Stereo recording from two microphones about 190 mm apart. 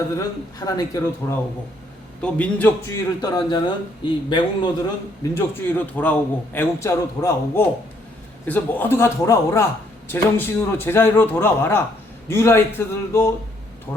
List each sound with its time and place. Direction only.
0.6 s a man's voice: 20° left (ahead or behind)
5.4 s a man's voice: 10° left (ahead or behind)